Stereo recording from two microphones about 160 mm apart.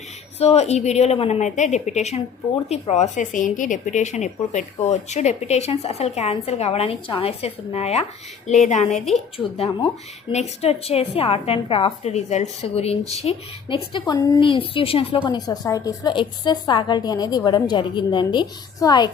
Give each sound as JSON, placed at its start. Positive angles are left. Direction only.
{"t": 0.3, "sound": "a woman's voice", "side_deg": 40}
{"t": 9.6, "sound": "a woman's voice", "side_deg": 35}